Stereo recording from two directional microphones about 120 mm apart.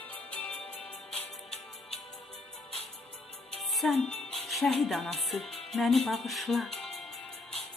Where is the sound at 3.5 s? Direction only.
Centre (ahead or behind).